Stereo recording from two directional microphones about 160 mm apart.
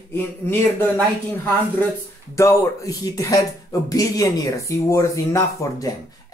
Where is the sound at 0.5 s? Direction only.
10° left (ahead or behind).